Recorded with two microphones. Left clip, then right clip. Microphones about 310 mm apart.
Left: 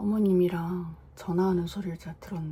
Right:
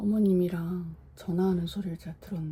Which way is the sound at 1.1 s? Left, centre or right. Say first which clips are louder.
Left 2 dB; left.